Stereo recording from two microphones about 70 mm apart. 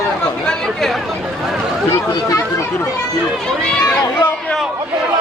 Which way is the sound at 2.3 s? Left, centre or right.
Left.